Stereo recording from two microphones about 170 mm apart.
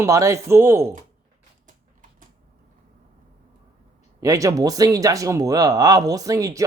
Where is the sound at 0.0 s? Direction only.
20° right (ahead or behind).